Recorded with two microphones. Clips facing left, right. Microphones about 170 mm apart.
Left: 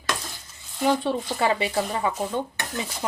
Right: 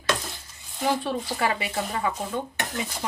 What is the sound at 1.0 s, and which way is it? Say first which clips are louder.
Speech: left 3 dB; 25° left (ahead or behind).